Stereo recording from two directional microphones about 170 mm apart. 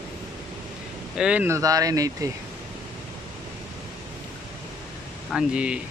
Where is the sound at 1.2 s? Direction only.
10° right (ahead or behind).